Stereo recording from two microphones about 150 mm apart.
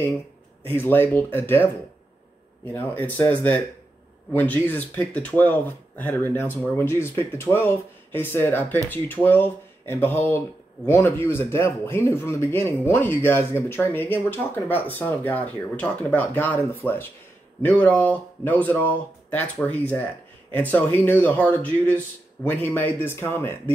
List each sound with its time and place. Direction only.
0.7 s speech: 15° left (ahead or behind)